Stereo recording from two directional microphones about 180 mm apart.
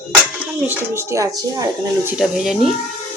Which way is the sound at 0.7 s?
15° right (ahead or behind).